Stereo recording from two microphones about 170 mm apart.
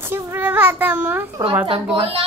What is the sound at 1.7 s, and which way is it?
Speech, 35° right (ahead or behind).